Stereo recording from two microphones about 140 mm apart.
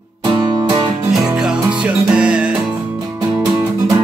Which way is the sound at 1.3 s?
5° right (ahead or behind).